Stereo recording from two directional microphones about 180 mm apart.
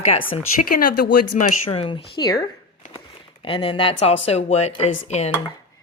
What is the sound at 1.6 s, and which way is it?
Speech, 30° left (ahead or behind).